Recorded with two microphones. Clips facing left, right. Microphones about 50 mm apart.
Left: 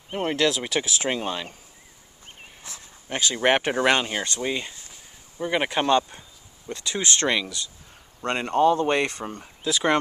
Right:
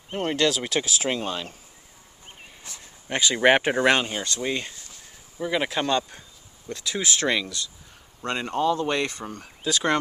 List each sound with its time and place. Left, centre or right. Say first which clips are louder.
0.1 s speech: even; centre
3.1 s speech: right 2 dB; right
3.3 s speech: right 2 dB; centre
3.8 s speech: right 1 dB; centre
4.1 s speech: left 2 dB; left
4.4 s speech: even; centre
8.3 s speech: left 4 dB; left
9.6 s speech: left 1 dB; centre